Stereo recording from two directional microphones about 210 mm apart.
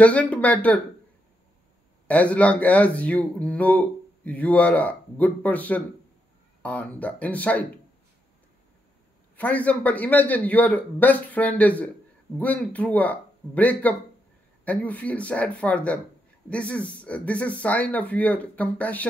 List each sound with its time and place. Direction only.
0.0 s speech: 5° left (ahead or behind)
2.0 s speech: 5° left (ahead or behind)
9.4 s speech: 5° left (ahead or behind)